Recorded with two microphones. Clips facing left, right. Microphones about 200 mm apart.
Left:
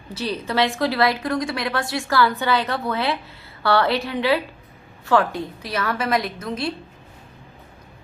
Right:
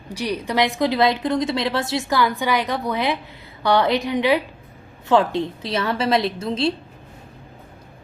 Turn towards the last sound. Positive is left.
turn(degrees=-25)  # may be behind; listen again after turning